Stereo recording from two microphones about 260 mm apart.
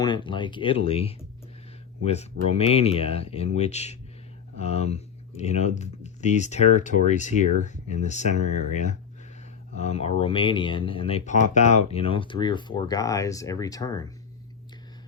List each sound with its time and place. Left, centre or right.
0.0 s speech: centre